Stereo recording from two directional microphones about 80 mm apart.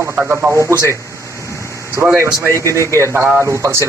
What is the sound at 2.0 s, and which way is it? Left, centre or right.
Speech, right.